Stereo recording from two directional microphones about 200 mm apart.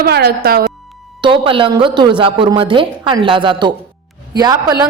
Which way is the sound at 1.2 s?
25° right (ahead or behind).